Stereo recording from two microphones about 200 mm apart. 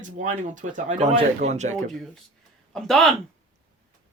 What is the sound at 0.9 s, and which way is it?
Speech, 25° right (ahead or behind).